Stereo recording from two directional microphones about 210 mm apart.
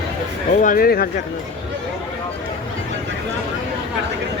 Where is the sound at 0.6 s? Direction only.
40° left (ahead or behind).